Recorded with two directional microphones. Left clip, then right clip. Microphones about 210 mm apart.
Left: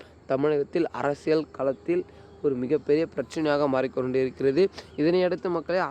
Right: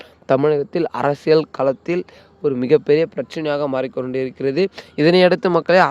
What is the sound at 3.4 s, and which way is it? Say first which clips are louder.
Speech: right 3 dB; 20° right (ahead or behind).